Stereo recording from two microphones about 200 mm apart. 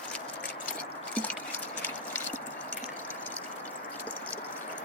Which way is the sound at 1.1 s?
5° left (ahead or behind).